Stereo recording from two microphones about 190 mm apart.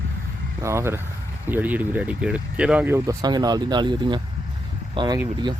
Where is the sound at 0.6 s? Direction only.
15° right (ahead or behind).